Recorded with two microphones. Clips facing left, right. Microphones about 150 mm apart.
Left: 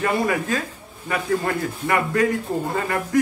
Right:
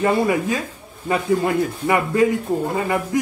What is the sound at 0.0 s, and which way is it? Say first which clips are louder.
A man's voice: right 4 dB; 20° right (ahead or behind).